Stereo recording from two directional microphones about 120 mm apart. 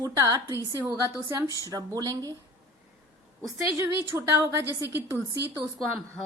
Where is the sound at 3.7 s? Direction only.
20° right (ahead or behind).